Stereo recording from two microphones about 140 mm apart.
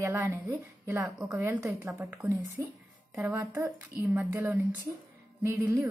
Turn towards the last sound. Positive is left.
turn(degrees=-20)  # may be behind; listen again after turning